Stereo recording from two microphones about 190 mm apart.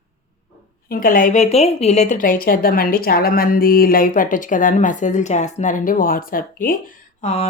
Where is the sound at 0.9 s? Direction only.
50° left (ahead or behind).